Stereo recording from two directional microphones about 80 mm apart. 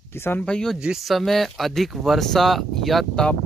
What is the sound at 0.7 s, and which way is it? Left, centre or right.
Speech, centre.